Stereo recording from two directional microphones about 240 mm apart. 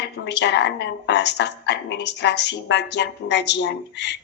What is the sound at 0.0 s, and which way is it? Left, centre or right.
A woman's voice, left.